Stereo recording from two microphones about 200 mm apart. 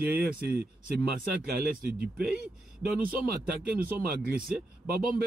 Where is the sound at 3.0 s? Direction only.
45° right (ahead or behind).